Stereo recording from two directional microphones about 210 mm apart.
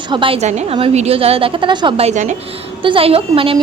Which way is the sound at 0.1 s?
25° right (ahead or behind).